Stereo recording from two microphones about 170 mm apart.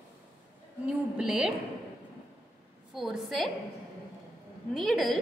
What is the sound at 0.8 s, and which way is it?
Speech, 5° right (ahead or behind).